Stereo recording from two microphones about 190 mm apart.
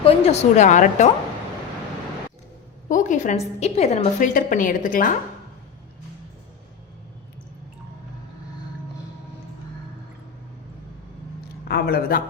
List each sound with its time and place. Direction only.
0.0 s speech: 30° left (ahead or behind)
2.9 s a woman's voice: 40° left (ahead or behind)
11.7 s a woman's voice: 55° left (ahead or behind)